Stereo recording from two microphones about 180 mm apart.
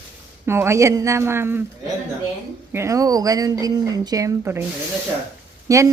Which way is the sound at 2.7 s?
15° right (ahead or behind).